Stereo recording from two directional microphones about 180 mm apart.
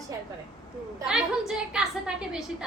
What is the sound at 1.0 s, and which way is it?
Speech, 5° right (ahead or behind).